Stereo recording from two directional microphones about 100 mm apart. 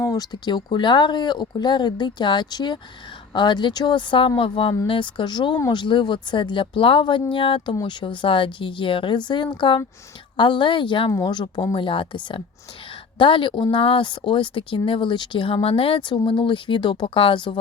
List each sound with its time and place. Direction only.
0.0 s speech: 40° left (ahead or behind)